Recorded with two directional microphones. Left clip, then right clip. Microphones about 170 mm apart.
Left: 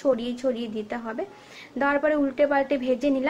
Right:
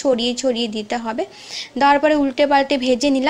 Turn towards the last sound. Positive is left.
turn(degrees=-40)  # may be behind; listen again after turning